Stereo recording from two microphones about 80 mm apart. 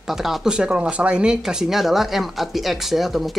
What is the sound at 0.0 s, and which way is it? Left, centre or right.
Speech, centre.